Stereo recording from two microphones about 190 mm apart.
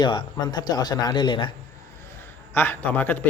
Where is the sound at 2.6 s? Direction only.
10° left (ahead or behind).